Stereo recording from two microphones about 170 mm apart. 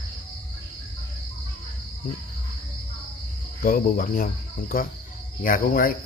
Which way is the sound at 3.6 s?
55° left (ahead or behind).